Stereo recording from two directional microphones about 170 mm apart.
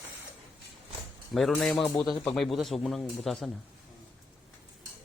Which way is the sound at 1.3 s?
Centre (ahead or behind).